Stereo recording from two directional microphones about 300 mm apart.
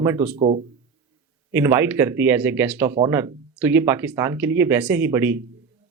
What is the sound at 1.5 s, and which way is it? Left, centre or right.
Speech, centre.